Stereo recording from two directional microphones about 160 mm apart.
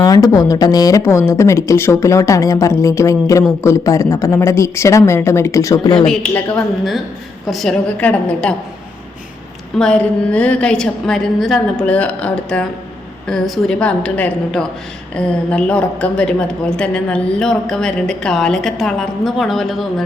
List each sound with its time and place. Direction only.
0.0 s speech: 25° left (ahead or behind)
6.1 s a woman's voice: 5° left (ahead or behind)
9.7 s a woman's voice: 5° left (ahead or behind)